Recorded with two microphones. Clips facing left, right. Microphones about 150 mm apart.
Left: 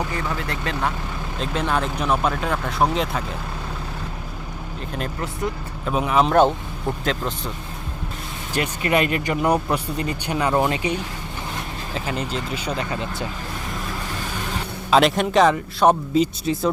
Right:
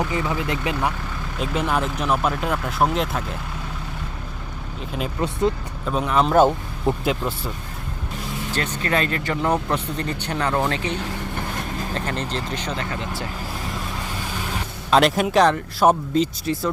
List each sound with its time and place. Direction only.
0.1 s speech: 15° right (ahead or behind); by 3.3 s centre (ahead or behind)
5.8 s speech: 10° left (ahead or behind); by 7.5 s 10° right (ahead or behind)
8.5 s speech: 15° left (ahead or behind)
11.9 s speech: 10° left (ahead or behind)
14.8 s speech: centre (ahead or behind)